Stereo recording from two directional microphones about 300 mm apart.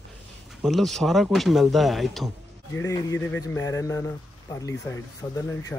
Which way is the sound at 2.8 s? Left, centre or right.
Centre.